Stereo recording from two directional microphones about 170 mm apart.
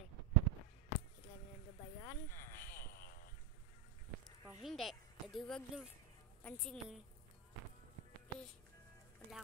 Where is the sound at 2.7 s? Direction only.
60° left (ahead or behind).